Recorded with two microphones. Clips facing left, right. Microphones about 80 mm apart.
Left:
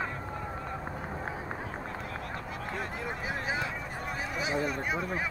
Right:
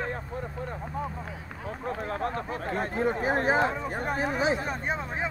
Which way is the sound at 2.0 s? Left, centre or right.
Right.